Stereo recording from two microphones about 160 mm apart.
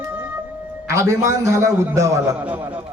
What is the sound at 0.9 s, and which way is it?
A man's voice, 20° right (ahead or behind).